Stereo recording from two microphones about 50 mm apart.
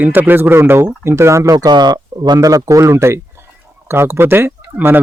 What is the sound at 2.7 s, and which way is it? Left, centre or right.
Speech, right.